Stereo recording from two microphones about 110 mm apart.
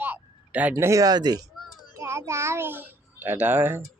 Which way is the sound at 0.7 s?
30° right (ahead or behind).